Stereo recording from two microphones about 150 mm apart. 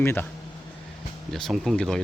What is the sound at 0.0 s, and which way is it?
Speech, 15° left (ahead or behind).